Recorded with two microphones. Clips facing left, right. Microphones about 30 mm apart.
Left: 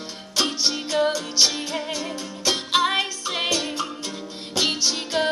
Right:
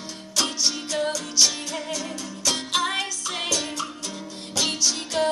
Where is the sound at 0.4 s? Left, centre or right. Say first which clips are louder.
Left 2 dB; left.